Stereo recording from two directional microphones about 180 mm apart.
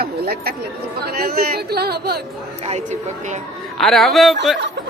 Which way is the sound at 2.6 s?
40° right (ahead or behind).